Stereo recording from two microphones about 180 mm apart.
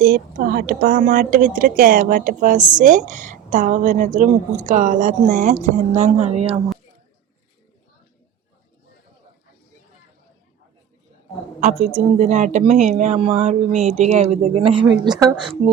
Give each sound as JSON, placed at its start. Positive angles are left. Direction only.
{"t": 0.0, "sound": "speech", "side_deg": -50}
{"t": 11.9, "sound": "a woman's voice", "side_deg": -40}